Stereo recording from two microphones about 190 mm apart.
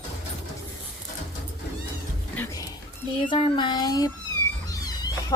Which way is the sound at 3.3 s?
25° left (ahead or behind).